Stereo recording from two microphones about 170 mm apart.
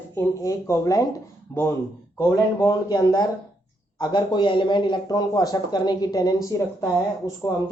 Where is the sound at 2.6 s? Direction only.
25° left (ahead or behind).